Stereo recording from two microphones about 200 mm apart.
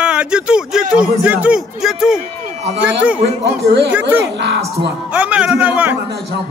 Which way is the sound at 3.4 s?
50° right (ahead or behind).